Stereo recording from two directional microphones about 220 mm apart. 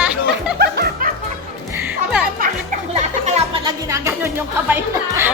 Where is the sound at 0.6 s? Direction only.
45° right (ahead or behind).